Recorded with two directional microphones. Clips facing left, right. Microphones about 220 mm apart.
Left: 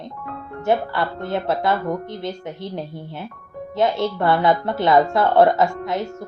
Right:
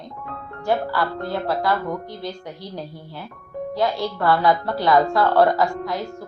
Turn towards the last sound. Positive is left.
turn(degrees=20)  # may be behind; listen again after turning